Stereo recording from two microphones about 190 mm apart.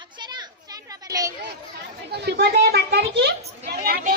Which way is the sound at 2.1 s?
60° right (ahead or behind).